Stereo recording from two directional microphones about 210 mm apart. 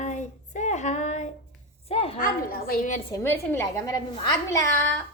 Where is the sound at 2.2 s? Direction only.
45° left (ahead or behind).